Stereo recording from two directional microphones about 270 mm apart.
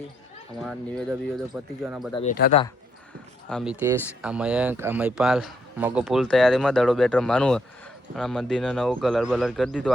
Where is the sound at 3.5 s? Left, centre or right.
Centre.